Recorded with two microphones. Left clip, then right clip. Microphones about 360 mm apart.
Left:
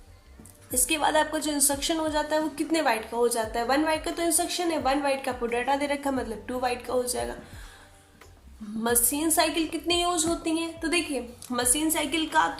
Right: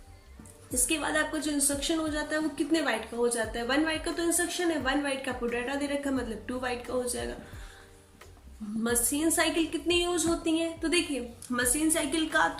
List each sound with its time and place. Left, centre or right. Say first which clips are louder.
0.7 s a woman's voice: left 5 dB; centre
8.8 s a woman's voice: left 2 dB; centre